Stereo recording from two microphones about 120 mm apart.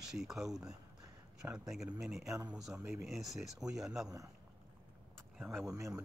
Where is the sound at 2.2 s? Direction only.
25° right (ahead or behind).